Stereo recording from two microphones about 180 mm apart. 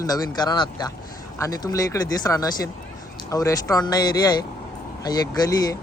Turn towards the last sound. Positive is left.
turn(degrees=20)  # may be behind; listen again after turning